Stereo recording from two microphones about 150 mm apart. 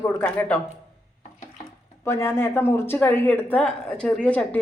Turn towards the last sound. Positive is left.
turn(degrees=10)  # may be behind; listen again after turning